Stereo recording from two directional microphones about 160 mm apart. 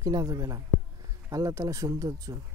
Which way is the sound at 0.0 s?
25° right (ahead or behind).